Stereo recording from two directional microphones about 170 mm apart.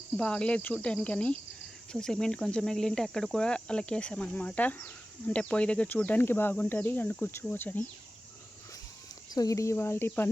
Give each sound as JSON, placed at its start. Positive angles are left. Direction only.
{"t": 0.2, "sound": "cricket", "side_deg": 5}
{"t": 9.3, "sound": "cricket", "side_deg": 20}